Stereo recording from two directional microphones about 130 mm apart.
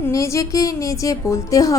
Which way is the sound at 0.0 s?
25° left (ahead or behind).